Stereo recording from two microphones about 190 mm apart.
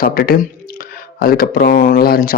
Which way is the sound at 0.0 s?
50° left (ahead or behind).